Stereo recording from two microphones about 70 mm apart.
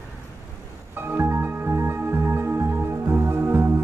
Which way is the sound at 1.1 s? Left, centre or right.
Right.